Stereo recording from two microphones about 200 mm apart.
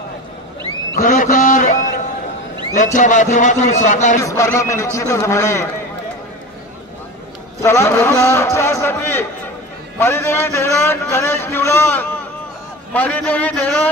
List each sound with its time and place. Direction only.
0.9 s a sound: 45° left (ahead or behind)
2.7 s a man's voice: 40° left (ahead or behind)
4.2 s a man's voice: 15° left (ahead or behind)
7.6 s a man's voice: 15° left (ahead or behind)